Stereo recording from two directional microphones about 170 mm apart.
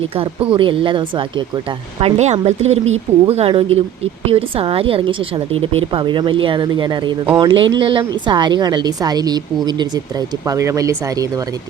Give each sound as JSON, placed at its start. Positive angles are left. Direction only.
{"t": 0.5, "sound": "a woman's voice", "side_deg": -30}